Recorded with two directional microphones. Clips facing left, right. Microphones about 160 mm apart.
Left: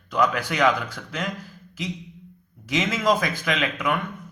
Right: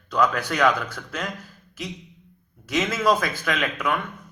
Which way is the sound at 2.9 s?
15° left (ahead or behind).